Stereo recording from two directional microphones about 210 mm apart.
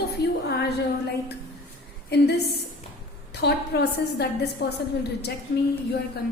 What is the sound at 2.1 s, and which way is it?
Speech, 50° left (ahead or behind).